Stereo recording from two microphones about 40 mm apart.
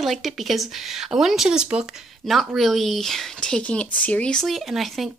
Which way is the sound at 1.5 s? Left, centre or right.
Right.